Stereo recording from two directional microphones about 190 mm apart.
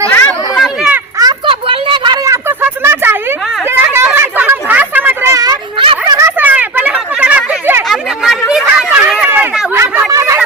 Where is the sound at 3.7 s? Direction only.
10° right (ahead or behind); by 6.0 s 25° right (ahead or behind).